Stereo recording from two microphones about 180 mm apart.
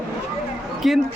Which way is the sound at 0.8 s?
Centre (ahead or behind).